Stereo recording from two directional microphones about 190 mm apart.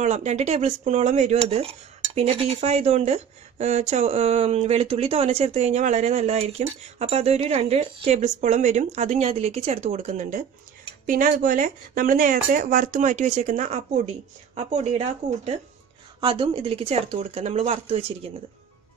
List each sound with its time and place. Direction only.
0.0 s speech: 35° right (ahead or behind)
16.2 s speech: 25° right (ahead or behind)